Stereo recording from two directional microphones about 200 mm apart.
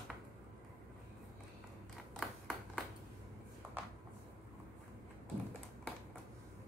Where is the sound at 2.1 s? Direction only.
Centre (ahead or behind).